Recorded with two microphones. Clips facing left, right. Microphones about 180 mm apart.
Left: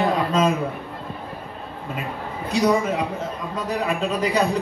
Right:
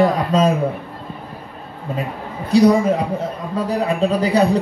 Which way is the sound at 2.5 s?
35° right (ahead or behind).